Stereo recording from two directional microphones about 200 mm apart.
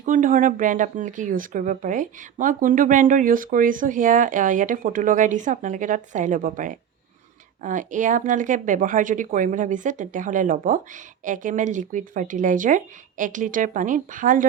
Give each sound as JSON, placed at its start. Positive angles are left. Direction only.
{"t": 0.0, "sound": "speech", "side_deg": -40}